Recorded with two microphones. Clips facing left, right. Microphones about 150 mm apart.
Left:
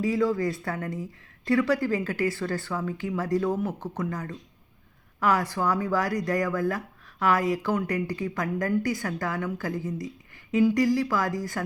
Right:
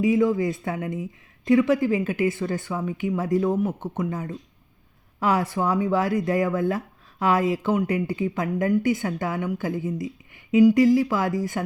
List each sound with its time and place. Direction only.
0.0 s speech: 20° right (ahead or behind)